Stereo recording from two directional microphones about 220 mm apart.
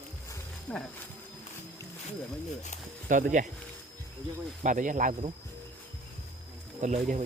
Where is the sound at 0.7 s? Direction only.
5° left (ahead or behind).